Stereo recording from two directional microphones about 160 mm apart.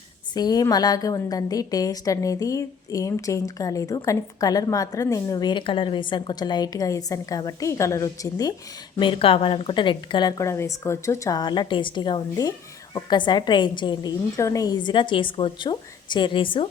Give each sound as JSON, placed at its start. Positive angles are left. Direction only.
{"t": 0.3, "sound": "a woman's voice", "side_deg": 25}
{"t": 9.0, "sound": "a woman's voice", "side_deg": 35}